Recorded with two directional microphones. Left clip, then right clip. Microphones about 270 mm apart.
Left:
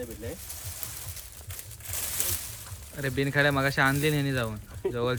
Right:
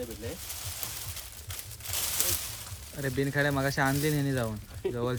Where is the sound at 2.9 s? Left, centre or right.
Centre.